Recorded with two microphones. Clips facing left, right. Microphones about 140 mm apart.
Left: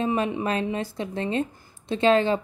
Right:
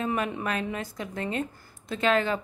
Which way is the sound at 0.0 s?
30° left (ahead or behind).